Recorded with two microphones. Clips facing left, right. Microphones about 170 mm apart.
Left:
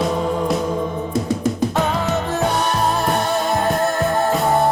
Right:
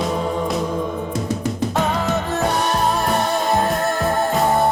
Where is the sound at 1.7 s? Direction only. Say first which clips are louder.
Even; centre (ahead or behind).